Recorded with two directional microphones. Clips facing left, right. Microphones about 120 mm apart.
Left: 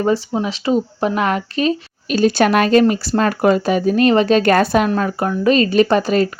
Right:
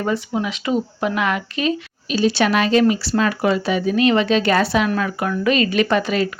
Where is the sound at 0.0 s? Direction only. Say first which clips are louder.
Left 4 dB; 30° left (ahead or behind); by 4.9 s 45° left (ahead or behind).